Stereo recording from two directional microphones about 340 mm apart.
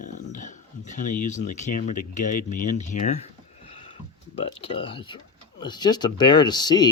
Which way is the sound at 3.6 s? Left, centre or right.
Centre.